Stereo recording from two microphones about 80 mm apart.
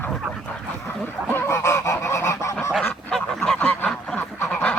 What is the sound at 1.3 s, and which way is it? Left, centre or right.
Goose, left.